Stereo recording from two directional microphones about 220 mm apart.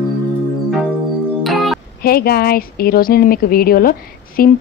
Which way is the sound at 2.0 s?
45° left (ahead or behind).